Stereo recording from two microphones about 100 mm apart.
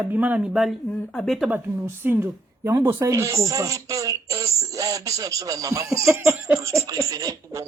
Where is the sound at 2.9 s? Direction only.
30° right (ahead or behind).